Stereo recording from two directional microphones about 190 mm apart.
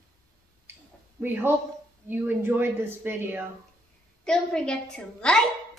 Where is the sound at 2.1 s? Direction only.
10° right (ahead or behind).